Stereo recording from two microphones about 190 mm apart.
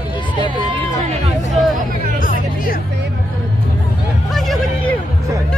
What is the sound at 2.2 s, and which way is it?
Music, 50° left (ahead or behind).